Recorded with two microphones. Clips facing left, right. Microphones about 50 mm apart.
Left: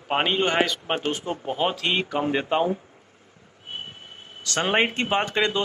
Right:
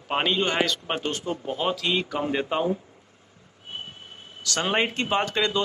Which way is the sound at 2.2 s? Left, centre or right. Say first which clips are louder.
Left 2 dB; left.